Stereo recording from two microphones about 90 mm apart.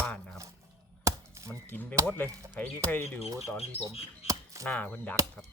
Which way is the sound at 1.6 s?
20° left (ahead or behind).